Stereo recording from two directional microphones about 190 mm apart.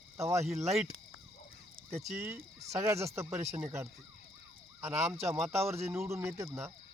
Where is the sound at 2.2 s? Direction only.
15° right (ahead or behind).